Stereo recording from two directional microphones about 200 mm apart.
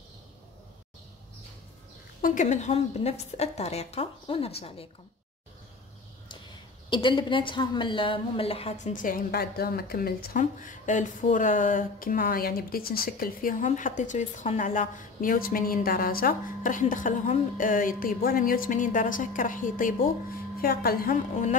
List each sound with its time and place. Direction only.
2.2 s a woman's voice: 40° left (ahead or behind)
6.9 s a woman's voice: 25° left (ahead or behind); by 21.5 s 40° left (ahead or behind)